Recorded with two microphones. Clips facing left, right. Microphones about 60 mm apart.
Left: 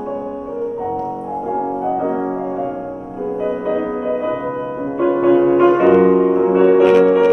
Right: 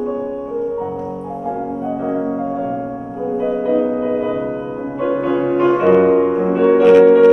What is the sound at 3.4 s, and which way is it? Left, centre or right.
Music, centre.